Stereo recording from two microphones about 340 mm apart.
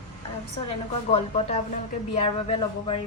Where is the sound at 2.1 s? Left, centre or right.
Centre.